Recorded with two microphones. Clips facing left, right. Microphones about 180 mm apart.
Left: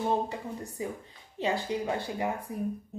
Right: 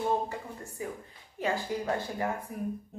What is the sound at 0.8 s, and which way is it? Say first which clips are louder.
Speech: right 1 dB; 25° left (ahead or behind).